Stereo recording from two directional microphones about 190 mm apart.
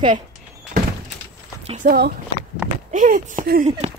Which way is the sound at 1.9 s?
55° right (ahead or behind).